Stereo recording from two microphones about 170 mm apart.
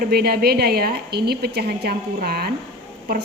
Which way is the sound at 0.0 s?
65° right (ahead or behind).